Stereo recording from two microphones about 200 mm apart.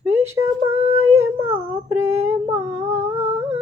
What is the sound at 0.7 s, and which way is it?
Female singing, 35° right (ahead or behind).